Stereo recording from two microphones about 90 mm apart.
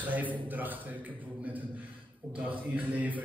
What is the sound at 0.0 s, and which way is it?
Speech, 20° right (ahead or behind).